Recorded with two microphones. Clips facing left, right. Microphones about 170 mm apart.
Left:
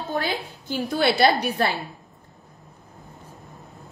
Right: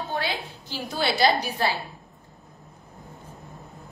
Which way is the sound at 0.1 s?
45° left (ahead or behind).